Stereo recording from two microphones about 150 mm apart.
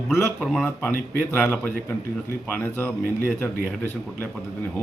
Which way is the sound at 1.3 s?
15° left (ahead or behind).